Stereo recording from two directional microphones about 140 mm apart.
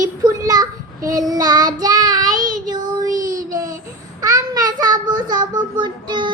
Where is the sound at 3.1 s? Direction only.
75° right (ahead or behind).